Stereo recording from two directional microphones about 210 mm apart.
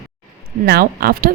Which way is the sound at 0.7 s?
45° right (ahead or behind).